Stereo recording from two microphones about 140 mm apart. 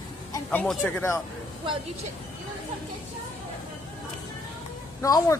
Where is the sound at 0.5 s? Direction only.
10° left (ahead or behind).